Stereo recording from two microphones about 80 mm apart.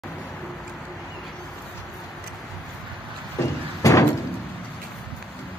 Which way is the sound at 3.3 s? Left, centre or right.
Left.